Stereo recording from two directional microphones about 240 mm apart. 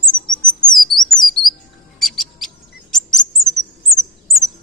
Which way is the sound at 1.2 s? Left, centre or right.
Centre.